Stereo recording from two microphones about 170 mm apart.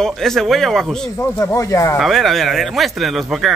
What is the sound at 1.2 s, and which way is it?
Speech, 15° left (ahead or behind).